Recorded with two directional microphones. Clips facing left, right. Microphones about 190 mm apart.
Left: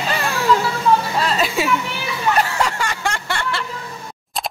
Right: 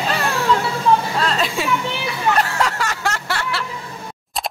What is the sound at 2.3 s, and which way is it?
Snicker, centre (ahead or behind).